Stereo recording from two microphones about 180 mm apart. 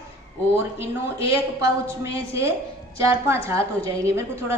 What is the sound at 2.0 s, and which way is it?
A woman's voice, 15° right (ahead or behind).